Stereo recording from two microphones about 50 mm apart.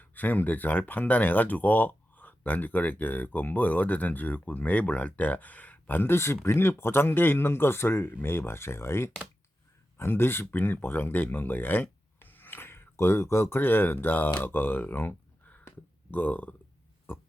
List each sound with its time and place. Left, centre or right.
0.0 s speech: left
6.1 s speech: left
13.6 s speech: left